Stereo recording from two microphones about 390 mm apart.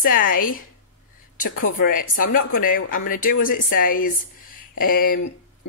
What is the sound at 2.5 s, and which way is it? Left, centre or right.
Speech, left.